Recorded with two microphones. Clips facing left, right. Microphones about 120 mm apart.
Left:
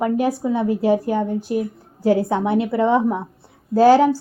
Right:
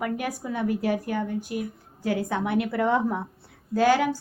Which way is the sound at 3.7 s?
35° left (ahead or behind).